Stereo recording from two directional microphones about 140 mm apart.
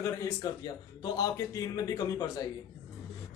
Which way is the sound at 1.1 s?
25° left (ahead or behind).